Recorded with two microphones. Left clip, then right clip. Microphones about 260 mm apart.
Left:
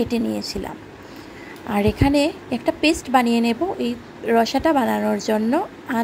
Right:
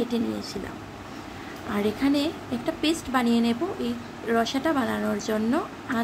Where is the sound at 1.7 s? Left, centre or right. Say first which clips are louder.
Left 6 dB; left.